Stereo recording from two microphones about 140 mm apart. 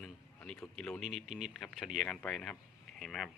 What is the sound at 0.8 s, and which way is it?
Speech, 5° left (ahead or behind).